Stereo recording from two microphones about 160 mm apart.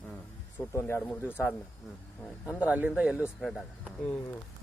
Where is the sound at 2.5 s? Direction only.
10° right (ahead or behind).